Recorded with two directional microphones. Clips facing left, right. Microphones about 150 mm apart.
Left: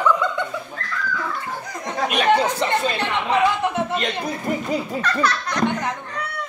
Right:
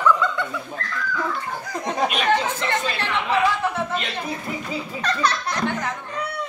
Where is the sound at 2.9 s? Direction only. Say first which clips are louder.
Left 2 dB; 20° left (ahead or behind).